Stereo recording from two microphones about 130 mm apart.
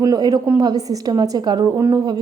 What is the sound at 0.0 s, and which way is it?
A woman's voice, 30° right (ahead or behind).